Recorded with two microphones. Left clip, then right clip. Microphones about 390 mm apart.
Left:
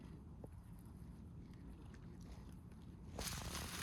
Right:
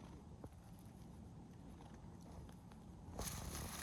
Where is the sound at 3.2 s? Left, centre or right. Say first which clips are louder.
Left 3 dB; right.